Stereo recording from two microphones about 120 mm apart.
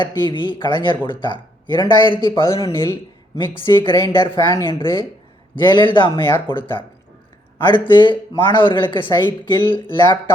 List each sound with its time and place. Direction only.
0.0 s speech: 40° left (ahead or behind)
2.4 s speech: 30° left (ahead or behind)
3.3 s speech: 40° left (ahead or behind)
9.6 s speech: 20° left (ahead or behind)